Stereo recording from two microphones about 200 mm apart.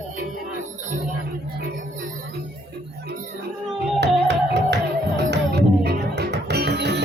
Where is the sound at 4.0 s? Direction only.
55° right (ahead or behind).